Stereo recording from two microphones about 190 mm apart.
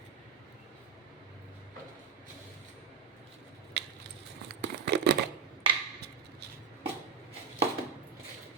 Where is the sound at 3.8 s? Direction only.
65° right (ahead or behind).